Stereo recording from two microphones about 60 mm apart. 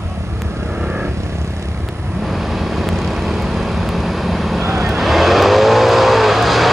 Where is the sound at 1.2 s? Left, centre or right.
Right.